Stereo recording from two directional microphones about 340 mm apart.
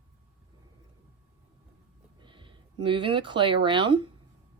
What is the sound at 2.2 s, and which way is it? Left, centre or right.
Speech, centre.